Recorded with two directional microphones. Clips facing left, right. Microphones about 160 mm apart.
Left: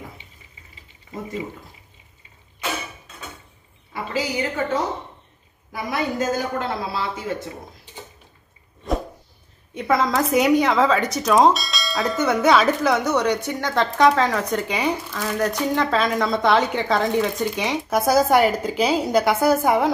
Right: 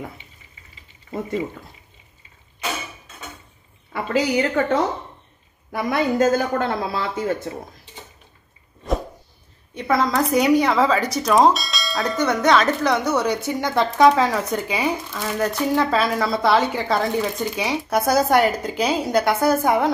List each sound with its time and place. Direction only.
3.9 s a woman's voice: 60° right (ahead or behind)
5.7 s a man's voice: 55° right (ahead or behind)
9.8 s speech: centre (ahead or behind)